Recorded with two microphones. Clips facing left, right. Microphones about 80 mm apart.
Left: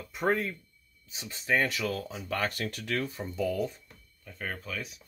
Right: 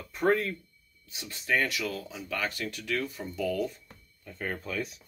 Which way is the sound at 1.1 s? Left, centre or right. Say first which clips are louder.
Left 1 dB; left.